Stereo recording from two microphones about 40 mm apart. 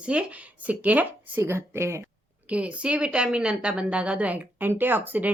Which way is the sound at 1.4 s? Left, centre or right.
Right.